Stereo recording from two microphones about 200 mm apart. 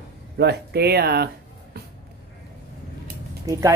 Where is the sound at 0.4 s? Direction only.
55° right (ahead or behind).